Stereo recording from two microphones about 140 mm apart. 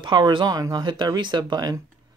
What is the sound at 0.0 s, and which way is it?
Speech, 35° right (ahead or behind).